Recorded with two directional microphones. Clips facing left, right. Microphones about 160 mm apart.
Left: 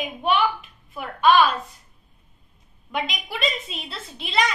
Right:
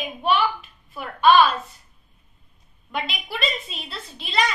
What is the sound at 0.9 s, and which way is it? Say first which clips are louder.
Speech: right 1 dB; 20° left (ahead or behind).